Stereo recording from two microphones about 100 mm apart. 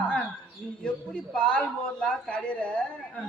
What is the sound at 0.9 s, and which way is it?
A man's voice, 10° left (ahead or behind).